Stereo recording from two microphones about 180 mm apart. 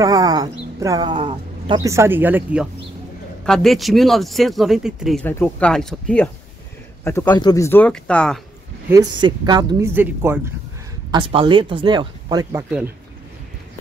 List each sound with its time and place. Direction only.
0.0 s speech: 20° right (ahead or behind); by 5.2 s centre (ahead or behind)
5.2 s speech: 10° left (ahead or behind)
7.1 s speech: 20° left (ahead or behind)
8.8 s speech: 20° right (ahead or behind)
9.9 s speech: 10° right (ahead or behind)
11.1 s speech: 25° right (ahead or behind)